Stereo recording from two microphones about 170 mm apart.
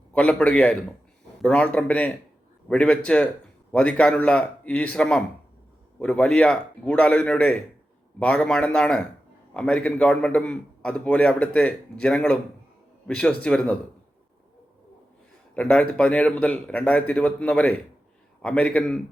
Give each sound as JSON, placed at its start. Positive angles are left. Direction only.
{"t": 0.1, "sound": "a man's voice", "side_deg": 5}
{"t": 15.5, "sound": "a man's voice", "side_deg": 5}